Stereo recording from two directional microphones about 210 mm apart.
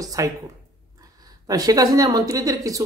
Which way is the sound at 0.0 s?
15° right (ahead or behind).